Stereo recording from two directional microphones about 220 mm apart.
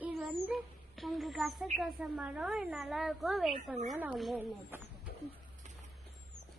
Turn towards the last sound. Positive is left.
turn(degrees=-5)  # may be behind; listen again after turning